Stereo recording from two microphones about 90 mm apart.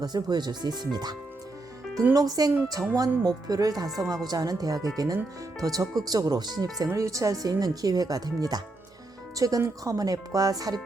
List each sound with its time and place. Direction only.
0.0 s speech: 50° right (ahead or behind)
2.1 s speech: 45° right (ahead or behind)
3.8 s speech: centre (ahead or behind)
4.3 s speech: 45° right (ahead or behind)